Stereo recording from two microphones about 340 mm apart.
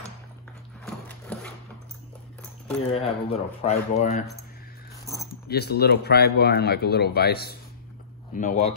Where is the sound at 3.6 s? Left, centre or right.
Left.